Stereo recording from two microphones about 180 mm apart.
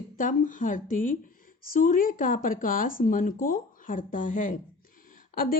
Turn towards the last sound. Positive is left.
turn(degrees=50)  # may be behind; listen again after turning